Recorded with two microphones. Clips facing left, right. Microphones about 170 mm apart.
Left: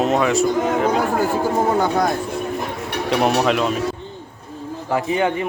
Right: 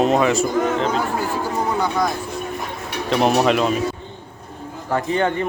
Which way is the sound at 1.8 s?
60° left (ahead or behind).